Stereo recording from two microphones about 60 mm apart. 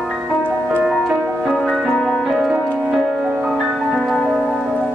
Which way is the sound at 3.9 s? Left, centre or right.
Centre.